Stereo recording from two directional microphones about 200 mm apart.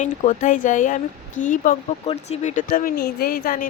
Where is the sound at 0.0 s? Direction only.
40° left (ahead or behind).